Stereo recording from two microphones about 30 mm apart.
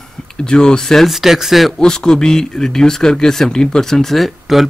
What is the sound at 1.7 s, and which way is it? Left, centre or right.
Speech, left.